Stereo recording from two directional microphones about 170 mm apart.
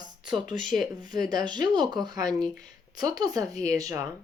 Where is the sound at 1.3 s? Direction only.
25° right (ahead or behind).